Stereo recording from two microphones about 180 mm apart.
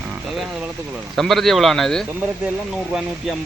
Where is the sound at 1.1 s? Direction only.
Centre (ahead or behind).